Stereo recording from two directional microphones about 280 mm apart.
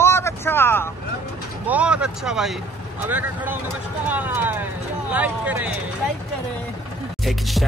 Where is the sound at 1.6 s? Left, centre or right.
Centre.